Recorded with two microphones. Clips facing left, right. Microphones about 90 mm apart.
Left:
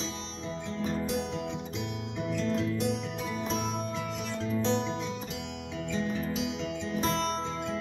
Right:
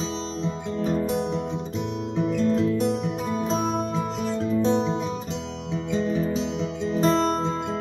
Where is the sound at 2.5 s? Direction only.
25° right (ahead or behind).